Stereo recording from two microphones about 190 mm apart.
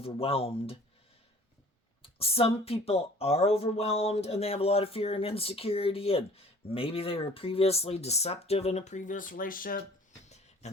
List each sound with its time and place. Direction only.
0.0 s speech: 30° left (ahead or behind)
2.0 s speech: 30° left (ahead or behind); by 9.8 s 45° left (ahead or behind)
10.2 s a sound: 35° left (ahead or behind)